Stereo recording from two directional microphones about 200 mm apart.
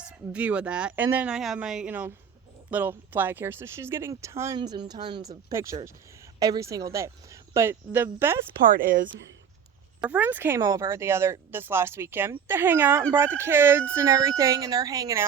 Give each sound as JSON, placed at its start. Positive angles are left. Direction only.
{"t": 0.3, "sound": "speech", "side_deg": -5}
{"t": 8.7, "sound": "speech", "side_deg": -45}
{"t": 9.0, "sound": "speech", "side_deg": -65}
{"t": 10.0, "sound": "speech", "side_deg": -10}